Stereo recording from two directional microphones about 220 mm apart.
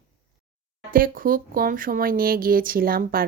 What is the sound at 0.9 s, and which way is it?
A woman's voice, 40° right (ahead or behind).